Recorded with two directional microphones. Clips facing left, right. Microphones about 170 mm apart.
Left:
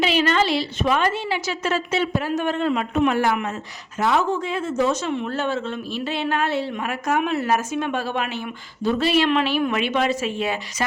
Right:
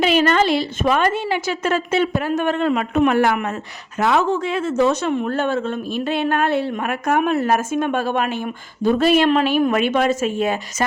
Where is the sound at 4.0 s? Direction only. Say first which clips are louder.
Right 3 dB; 75° right (ahead or behind).